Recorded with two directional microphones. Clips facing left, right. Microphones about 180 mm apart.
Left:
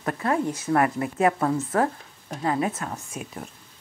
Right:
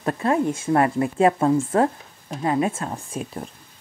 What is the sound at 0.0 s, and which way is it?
Speech, 25° right (ahead or behind).